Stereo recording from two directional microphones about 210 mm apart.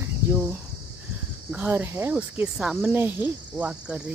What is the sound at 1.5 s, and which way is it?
Speech, 10° right (ahead or behind).